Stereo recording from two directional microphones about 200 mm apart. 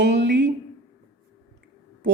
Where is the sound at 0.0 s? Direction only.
60° right (ahead or behind).